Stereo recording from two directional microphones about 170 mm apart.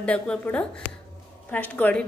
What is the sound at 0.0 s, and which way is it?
A woman's voice, 5° left (ahead or behind).